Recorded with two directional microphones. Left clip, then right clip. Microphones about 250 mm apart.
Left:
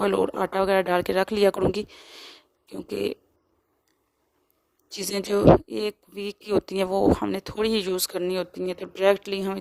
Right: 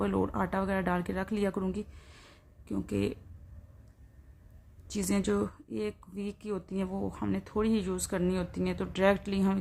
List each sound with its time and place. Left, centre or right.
0.0 s a woman's voice: left
4.9 s a woman's voice: left